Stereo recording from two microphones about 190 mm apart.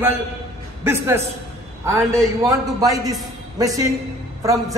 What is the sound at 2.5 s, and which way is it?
A man's voice, 20° right (ahead or behind).